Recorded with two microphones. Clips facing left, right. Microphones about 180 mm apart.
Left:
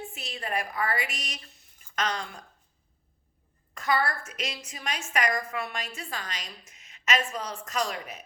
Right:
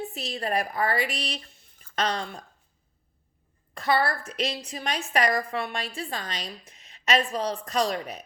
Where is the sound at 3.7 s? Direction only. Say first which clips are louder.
Right 3 dB; 30° right (ahead or behind).